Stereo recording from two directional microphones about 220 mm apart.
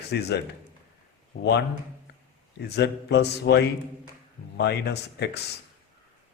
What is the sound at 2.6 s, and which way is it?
Speech, 50° left (ahead or behind).